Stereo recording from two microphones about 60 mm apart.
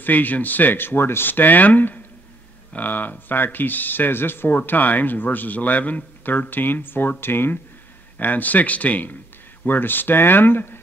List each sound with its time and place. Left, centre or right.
0.0 s speech: left
8.2 s speech: left